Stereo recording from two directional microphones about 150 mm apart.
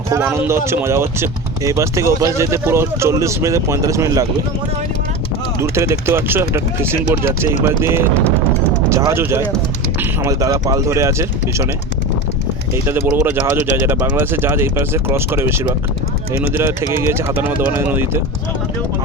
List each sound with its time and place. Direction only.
0.1 s speech: 15° right (ahead or behind)
5.5 s speech: 20° right (ahead or behind)
12.7 s speech: 15° right (ahead or behind)